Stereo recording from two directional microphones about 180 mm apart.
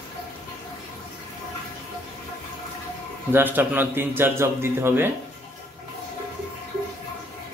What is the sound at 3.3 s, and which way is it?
Speech, 10° right (ahead or behind).